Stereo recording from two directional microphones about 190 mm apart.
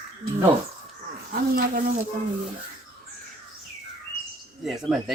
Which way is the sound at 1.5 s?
50° right (ahead or behind).